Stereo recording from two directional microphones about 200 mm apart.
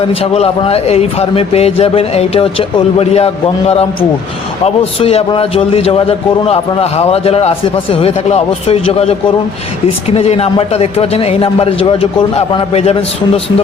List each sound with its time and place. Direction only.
0.2 s a man's voice: 30° left (ahead or behind)
10.2 s speech: 30° left (ahead or behind)